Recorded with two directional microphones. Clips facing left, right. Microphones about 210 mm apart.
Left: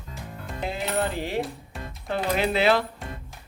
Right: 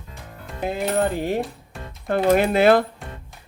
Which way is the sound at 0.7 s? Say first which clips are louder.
Right 6 dB; 50° right (ahead or behind).